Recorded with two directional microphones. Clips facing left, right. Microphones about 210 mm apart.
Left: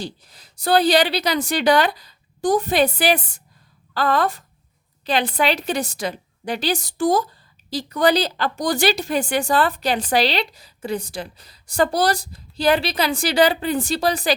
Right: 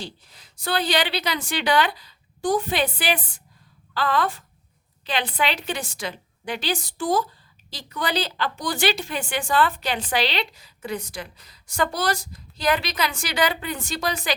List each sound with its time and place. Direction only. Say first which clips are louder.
0.0 s a woman's voice: left 5 dB; 40° left (ahead or behind)